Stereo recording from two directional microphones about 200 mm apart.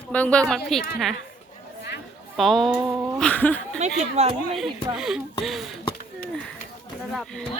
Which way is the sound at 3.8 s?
35° right (ahead or behind).